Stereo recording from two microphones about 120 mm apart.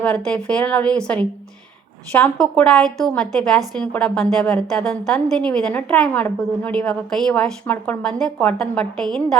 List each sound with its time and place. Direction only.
0.0 s a woman's voice: 10° left (ahead or behind)
2.4 s a woman's voice: 5° left (ahead or behind)